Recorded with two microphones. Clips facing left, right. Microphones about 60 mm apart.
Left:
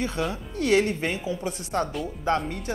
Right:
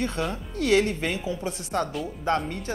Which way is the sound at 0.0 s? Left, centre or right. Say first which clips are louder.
Even; centre.